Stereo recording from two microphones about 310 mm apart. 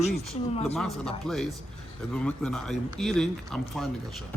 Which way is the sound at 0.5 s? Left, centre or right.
Centre.